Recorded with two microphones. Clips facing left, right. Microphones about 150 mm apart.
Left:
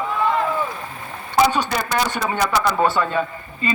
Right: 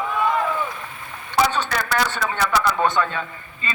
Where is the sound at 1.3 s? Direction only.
10° left (ahead or behind).